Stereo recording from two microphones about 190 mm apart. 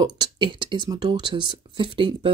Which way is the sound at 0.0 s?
25° right (ahead or behind).